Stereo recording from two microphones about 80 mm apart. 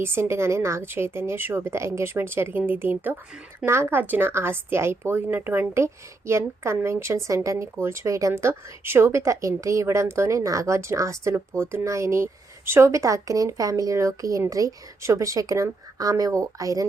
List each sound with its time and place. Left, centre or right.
0.0 s a woman's voice: right